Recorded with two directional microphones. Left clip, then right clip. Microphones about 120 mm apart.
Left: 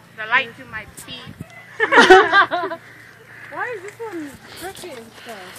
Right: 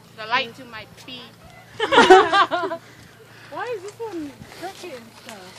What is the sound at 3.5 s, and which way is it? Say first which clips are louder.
Speech: left 2 dB; 15° left (ahead or behind).